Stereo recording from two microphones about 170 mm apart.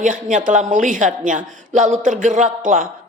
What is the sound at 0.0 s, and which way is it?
A woman's voice, 50° right (ahead or behind).